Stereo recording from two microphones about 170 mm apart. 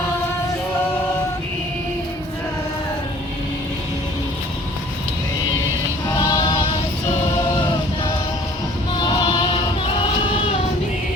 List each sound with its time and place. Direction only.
6.1 s music: 25° left (ahead or behind)
9.0 s music: 25° left (ahead or behind)